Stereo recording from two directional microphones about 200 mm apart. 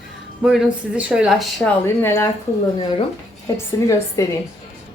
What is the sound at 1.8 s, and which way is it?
Speech, 15° left (ahead or behind).